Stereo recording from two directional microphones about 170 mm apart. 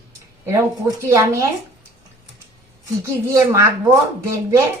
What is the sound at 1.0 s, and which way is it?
Speech, 20° right (ahead or behind).